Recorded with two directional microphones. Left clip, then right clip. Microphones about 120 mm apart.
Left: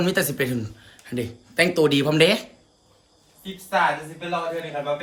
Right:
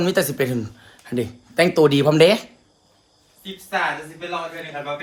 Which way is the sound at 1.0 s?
35° right (ahead or behind).